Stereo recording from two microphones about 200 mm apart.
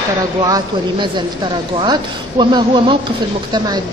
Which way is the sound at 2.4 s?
25° right (ahead or behind).